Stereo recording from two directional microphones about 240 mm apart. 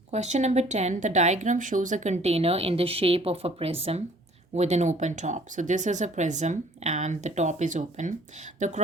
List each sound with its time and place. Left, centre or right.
0.1 s speech: right